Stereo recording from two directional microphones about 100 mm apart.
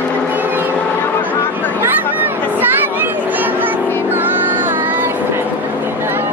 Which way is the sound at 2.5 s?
20° right (ahead or behind).